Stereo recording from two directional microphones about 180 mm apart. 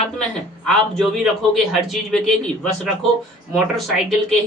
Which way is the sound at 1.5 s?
Centre (ahead or behind).